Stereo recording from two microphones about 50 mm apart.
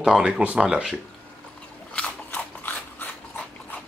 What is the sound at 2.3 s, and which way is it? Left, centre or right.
Biting, left.